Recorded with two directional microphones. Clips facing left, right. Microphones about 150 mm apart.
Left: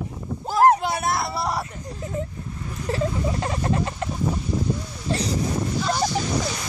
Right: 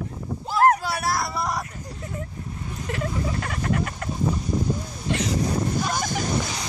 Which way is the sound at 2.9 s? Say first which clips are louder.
Left 3 dB; 30° left (ahead or behind).